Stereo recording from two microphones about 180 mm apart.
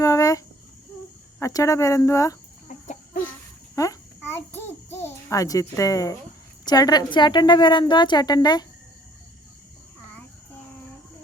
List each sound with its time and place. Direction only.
0.0 s cricket: 20° left (ahead or behind)
1.4 s speech: 20° left (ahead or behind)
2.8 s chicken: 45° left (ahead or behind)
3.8 s babbling: 15° left (ahead or behind)
6.7 s a woman's voice: 20° left (ahead or behind)